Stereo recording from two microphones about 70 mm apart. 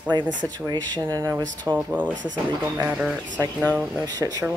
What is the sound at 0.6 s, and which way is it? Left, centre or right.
Speech, right.